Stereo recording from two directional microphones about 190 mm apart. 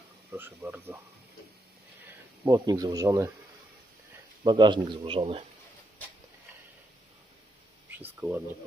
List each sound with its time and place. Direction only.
0.3 s speech: 10° right (ahead or behind)
2.4 s speech: 20° right (ahead or behind)
4.4 s speech: 25° right (ahead or behind)
8.2 s speech: 10° right (ahead or behind)